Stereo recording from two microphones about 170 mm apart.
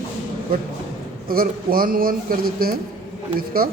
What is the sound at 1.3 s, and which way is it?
Speech, 60° right (ahead or behind).